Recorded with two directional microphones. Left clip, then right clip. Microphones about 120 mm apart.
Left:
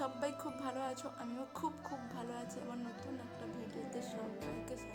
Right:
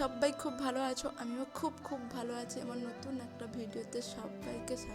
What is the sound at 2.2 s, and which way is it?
Speech, 40° right (ahead or behind).